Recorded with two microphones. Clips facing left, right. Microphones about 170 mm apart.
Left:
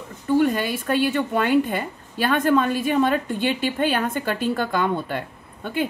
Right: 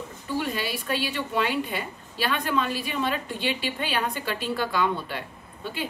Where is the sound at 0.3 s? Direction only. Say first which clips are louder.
Left 9 dB; 50° left (ahead or behind).